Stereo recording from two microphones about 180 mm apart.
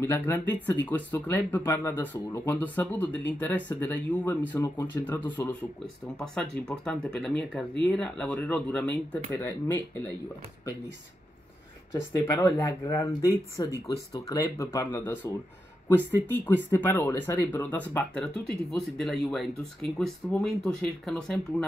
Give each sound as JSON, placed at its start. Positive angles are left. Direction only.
{"t": 0.0, "sound": "speech", "side_deg": 10}
{"t": 11.9, "sound": "speech", "side_deg": 15}